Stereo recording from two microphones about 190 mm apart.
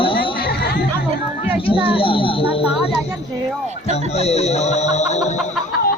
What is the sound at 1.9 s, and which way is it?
Speech, 30° left (ahead or behind).